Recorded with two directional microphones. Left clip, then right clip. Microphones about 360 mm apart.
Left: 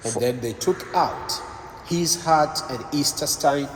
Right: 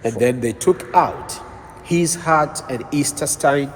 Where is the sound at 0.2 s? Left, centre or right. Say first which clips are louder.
Right 4 dB; right.